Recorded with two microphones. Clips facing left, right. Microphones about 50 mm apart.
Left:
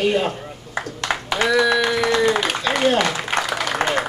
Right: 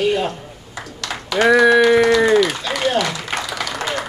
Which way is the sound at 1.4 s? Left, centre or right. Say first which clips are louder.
Right 6 dB; right.